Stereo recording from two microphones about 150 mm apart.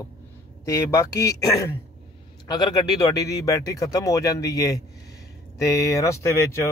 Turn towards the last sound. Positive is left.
turn(degrees=20)  # may be behind; listen again after turning